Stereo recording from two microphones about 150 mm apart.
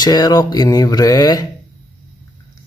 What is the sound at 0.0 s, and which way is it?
Speech, 25° left (ahead or behind).